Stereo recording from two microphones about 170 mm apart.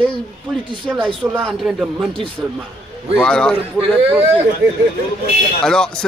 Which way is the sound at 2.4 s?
15° right (ahead or behind).